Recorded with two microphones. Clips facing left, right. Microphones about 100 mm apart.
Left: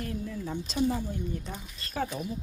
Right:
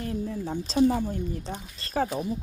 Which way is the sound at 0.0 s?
35° right (ahead or behind).